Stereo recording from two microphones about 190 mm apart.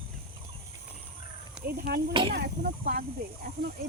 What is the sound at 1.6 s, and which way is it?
Speech, 55° right (ahead or behind).